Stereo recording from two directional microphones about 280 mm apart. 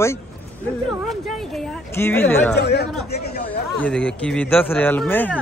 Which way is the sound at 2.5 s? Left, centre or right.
Left.